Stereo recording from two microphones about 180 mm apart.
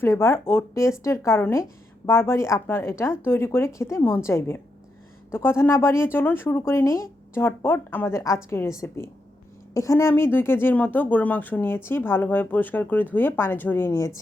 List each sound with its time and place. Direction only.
0.0 s speech: 15° left (ahead or behind)
9.7 s speech: 15° left (ahead or behind)